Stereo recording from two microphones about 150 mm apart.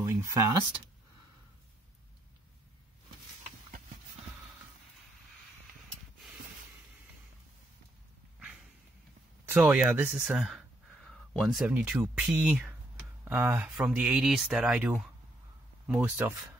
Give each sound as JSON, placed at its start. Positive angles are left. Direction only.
{"t": 0.0, "sound": "speech", "side_deg": -20}
{"t": 9.6, "sound": "speech", "side_deg": -10}